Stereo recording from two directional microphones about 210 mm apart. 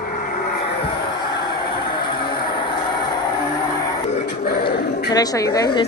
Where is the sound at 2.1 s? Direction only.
20° left (ahead or behind).